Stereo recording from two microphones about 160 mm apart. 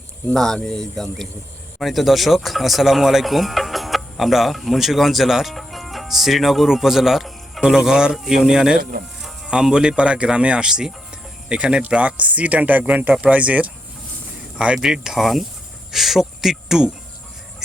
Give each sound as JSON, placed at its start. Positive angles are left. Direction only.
{"t": 0.3, "sound": "speech", "side_deg": 5}
{"t": 8.8, "sound": "speech", "side_deg": -70}
{"t": 9.2, "sound": "speech", "side_deg": -5}